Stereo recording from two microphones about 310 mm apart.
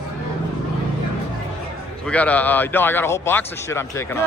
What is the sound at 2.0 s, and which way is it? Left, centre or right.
A man's voice, centre.